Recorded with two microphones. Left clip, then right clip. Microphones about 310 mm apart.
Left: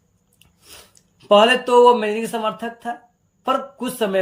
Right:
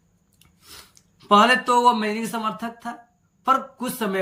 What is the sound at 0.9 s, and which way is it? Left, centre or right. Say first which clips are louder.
Speech: left 3 dB; centre.